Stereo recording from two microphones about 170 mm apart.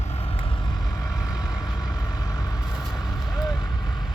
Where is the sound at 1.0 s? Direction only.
20° left (ahead or behind).